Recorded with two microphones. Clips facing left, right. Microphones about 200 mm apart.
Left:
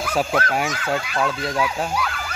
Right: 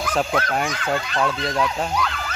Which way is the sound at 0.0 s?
5° left (ahead or behind).